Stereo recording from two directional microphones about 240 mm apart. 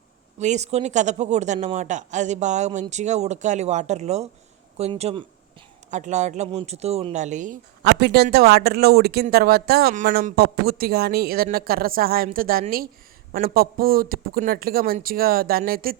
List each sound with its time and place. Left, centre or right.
0.3 s speech: right